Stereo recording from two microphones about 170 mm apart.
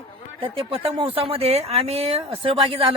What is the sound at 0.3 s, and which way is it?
Speech, 35° right (ahead or behind).